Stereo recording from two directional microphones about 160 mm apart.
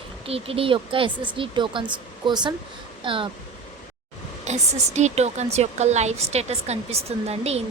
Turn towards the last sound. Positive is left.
turn(degrees=-40)  # may be behind; listen again after turning